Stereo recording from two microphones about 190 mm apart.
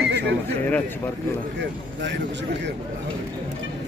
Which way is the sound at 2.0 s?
65° right (ahead or behind).